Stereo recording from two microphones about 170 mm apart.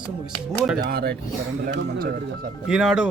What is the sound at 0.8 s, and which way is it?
Speech, 65° right (ahead or behind).